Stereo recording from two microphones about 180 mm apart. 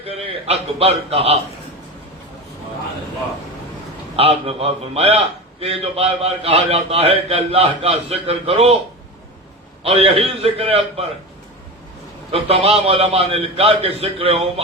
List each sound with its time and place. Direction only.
0.0 s a man's voice: 35° right (ahead or behind)
4.2 s a man's voice: 35° right (ahead or behind)
9.8 s a man's voice: 30° right (ahead or behind)
12.3 s a man's voice: 35° right (ahead or behind)